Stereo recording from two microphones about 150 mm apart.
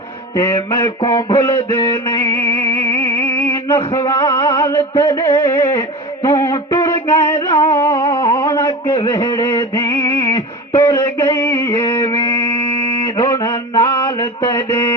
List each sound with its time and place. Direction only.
0.3 s a sound: 20° left (ahead or behind)
3.9 s music: 25° left (ahead or behind)
13.1 s mantra: 25° left (ahead or behind)